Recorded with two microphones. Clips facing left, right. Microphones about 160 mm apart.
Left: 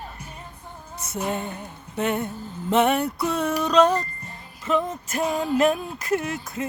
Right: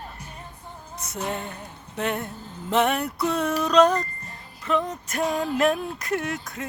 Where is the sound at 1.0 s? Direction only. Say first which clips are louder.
Left 3 dB; centre (ahead or behind).